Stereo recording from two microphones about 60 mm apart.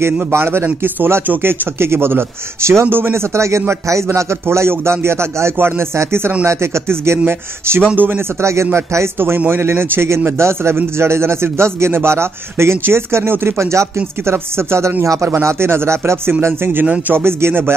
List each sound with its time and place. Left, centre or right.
0.3 s speech: right
0.7 s speech: right
7.9 s speech: right
8.4 s speech: right